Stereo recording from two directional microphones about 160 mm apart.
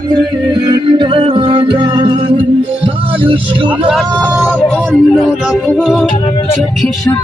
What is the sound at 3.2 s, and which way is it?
Speech, 35° right (ahead or behind).